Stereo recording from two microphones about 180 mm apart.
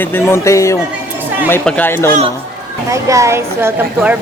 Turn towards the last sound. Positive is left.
turn(degrees=-10)  # may be behind; listen again after turning